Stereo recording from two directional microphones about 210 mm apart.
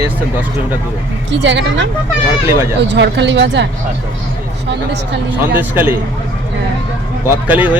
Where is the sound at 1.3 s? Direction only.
60° right (ahead or behind).